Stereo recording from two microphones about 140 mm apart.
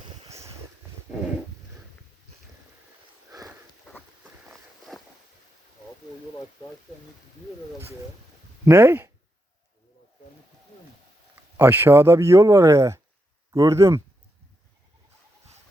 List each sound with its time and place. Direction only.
4.9 s a sound: centre (ahead or behind)
8.6 s speech: 15° right (ahead or behind)
11.5 s speech: 15° right (ahead or behind)